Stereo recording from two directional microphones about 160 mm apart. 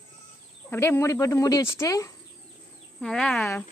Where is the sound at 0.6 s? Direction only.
15° left (ahead or behind).